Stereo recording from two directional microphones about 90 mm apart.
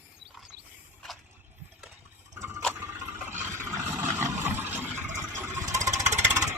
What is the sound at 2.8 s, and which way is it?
Vehicle, 30° right (ahead or behind).